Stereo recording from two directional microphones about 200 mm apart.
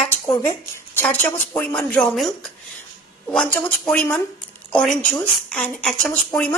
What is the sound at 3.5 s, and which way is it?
Speech, 5° left (ahead or behind).